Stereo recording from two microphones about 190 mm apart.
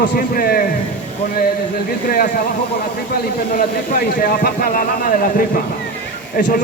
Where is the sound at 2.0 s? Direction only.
45° left (ahead or behind).